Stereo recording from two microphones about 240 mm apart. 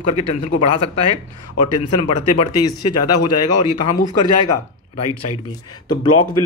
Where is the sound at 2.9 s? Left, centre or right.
Left.